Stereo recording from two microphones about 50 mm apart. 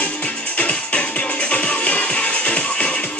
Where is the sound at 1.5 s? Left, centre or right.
Left.